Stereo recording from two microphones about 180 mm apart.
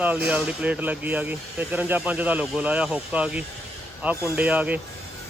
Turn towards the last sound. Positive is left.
turn(degrees=-10)  # may be behind; listen again after turning